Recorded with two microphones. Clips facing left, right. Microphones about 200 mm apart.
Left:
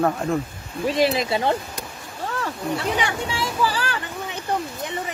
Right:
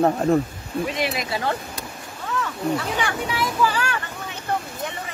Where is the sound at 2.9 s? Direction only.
25° left (ahead or behind).